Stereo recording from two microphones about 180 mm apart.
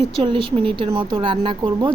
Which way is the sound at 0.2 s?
30° right (ahead or behind).